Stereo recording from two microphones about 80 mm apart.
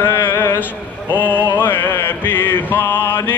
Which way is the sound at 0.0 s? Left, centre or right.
Left.